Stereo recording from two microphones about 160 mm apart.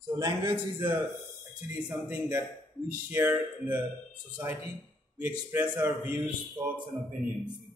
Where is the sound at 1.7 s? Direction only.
5° right (ahead or behind).